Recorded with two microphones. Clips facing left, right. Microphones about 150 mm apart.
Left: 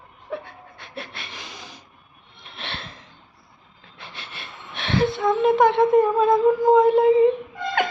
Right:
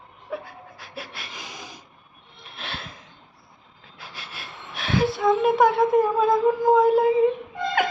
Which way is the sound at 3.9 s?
5° right (ahead or behind).